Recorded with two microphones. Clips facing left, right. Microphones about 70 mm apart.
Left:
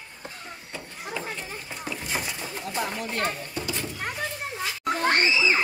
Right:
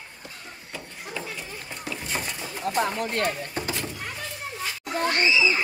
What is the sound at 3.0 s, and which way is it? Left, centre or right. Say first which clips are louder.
Speech: right 3 dB; right.